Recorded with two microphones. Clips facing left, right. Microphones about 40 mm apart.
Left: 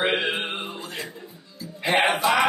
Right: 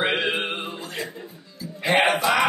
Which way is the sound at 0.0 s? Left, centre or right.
Centre.